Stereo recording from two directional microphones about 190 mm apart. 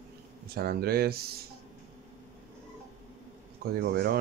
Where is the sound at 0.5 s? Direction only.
55° right (ahead or behind).